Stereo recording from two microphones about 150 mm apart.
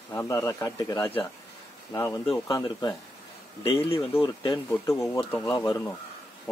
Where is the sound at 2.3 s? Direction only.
20° left (ahead or behind).